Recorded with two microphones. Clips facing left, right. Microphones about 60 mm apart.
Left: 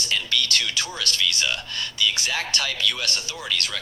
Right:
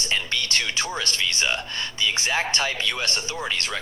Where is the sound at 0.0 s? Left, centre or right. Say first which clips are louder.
Left 1 dB; right.